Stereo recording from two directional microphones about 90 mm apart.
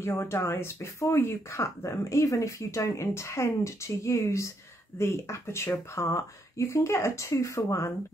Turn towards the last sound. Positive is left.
turn(degrees=35)  # may be behind; listen again after turning